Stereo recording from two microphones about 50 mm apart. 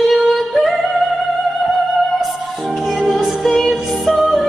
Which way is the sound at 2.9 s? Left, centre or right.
Centre.